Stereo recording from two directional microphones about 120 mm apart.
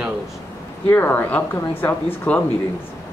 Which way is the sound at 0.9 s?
15° left (ahead or behind).